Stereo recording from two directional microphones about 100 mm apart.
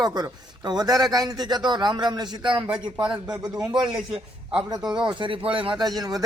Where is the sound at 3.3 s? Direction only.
10° right (ahead or behind).